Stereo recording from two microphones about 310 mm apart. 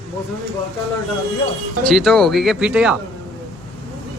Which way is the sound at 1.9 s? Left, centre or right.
Centre.